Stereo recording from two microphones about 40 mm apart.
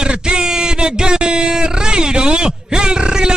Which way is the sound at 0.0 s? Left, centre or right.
Right.